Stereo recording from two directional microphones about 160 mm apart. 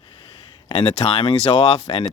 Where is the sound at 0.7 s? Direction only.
30° left (ahead or behind).